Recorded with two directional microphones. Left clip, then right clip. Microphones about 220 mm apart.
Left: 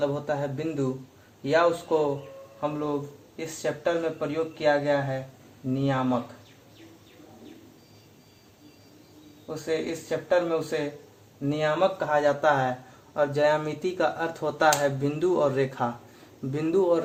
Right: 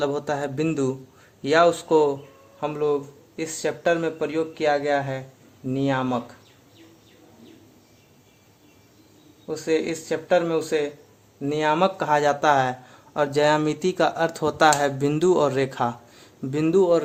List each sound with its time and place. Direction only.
0.0 s a man's voice: 45° right (ahead or behind)
9.6 s a man's voice: 45° right (ahead or behind)